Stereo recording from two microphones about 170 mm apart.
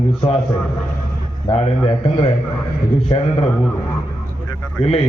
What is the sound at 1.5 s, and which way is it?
Speech, 35° left (ahead or behind).